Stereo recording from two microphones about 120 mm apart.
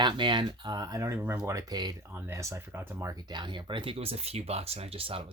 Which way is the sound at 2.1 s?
20° right (ahead or behind).